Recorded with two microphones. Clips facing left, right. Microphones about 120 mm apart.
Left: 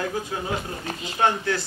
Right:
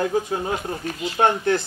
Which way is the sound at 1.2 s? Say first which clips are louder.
Right 3 dB; 35° right (ahead or behind).